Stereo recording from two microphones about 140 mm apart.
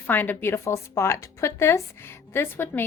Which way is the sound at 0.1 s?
15° left (ahead or behind).